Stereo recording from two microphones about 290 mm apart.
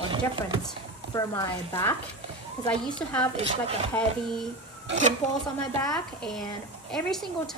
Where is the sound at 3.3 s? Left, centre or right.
Centre.